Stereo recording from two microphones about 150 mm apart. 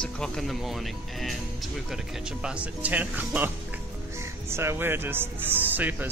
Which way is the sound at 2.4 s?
10° right (ahead or behind).